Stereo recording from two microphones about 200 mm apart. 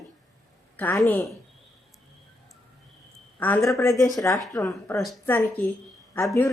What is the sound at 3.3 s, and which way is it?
Speech, 10° left (ahead or behind).